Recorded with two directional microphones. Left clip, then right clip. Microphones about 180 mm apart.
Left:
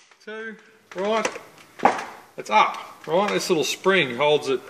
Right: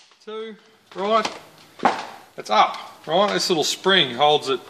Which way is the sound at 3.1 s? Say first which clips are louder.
Right 2 dB; 20° right (ahead or behind).